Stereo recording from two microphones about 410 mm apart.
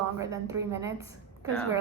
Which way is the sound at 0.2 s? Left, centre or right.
Centre.